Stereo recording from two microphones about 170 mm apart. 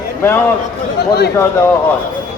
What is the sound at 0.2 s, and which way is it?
Speech, 15° left (ahead or behind).